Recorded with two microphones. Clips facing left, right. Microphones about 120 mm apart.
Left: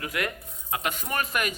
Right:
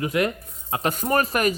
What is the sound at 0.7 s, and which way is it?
Speech, 40° right (ahead or behind).